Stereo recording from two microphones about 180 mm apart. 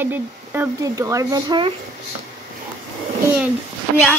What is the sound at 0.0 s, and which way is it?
Child singing, 10° right (ahead or behind).